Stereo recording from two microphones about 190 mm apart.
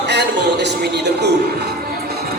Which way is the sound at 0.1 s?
60° right (ahead or behind).